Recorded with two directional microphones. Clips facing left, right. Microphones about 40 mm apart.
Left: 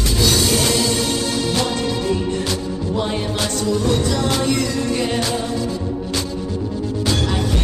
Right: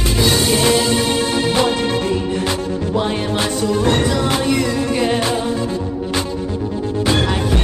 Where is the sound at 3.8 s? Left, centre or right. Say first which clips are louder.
Right 5 dB; right.